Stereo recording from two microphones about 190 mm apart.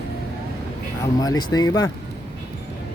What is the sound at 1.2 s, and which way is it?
Speech, 20° left (ahead or behind).